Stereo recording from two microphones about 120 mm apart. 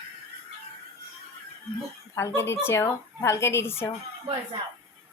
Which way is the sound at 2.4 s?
20° left (ahead or behind).